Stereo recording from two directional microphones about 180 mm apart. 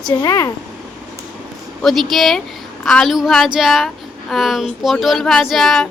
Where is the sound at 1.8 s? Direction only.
Centre (ahead or behind).